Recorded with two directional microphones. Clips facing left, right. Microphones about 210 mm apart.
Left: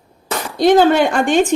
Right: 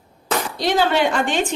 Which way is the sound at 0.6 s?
50° left (ahead or behind).